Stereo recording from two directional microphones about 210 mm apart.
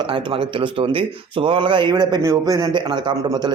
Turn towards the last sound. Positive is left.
turn(degrees=-20)  # may be behind; listen again after turning